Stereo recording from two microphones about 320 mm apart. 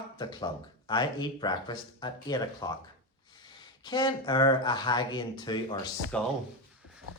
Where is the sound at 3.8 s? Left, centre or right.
Centre.